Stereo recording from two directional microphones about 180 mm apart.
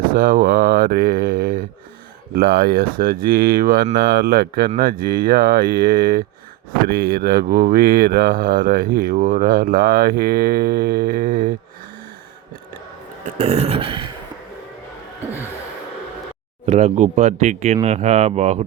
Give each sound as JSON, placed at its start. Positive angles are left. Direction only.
{"t": 0.1, "sound": "speech", "side_deg": -50}
{"t": 13.4, "sound": "speech", "side_deg": -35}
{"t": 16.6, "sound": "speech", "side_deg": -35}